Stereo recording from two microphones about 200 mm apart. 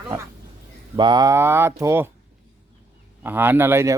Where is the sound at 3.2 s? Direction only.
10° right (ahead or behind).